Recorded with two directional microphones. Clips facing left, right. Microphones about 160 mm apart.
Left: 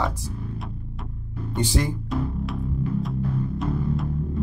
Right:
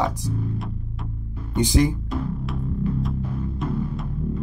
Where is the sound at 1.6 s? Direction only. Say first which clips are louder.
Right 5 dB; 15° right (ahead or behind).